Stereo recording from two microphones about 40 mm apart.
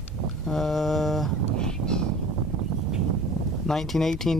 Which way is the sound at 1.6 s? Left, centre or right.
Centre.